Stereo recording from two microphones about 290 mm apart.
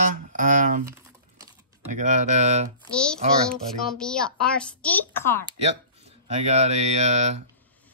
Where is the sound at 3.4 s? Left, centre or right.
Centre.